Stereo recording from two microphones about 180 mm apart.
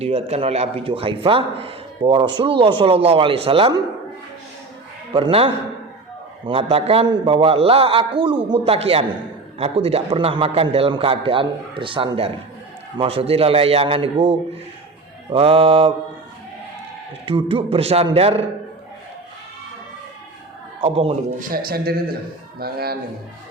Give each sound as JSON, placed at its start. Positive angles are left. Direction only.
{"t": 0.0, "sound": "a man's voice", "side_deg": -35}
{"t": 5.1, "sound": "a man's voice", "side_deg": -30}
{"t": 17.2, "sound": "a man's voice", "side_deg": -30}
{"t": 20.8, "sound": "a man's voice", "side_deg": -35}
{"t": 21.3, "sound": "a man's voice", "side_deg": -55}